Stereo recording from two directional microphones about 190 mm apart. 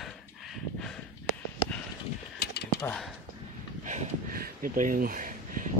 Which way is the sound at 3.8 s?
40° right (ahead or behind).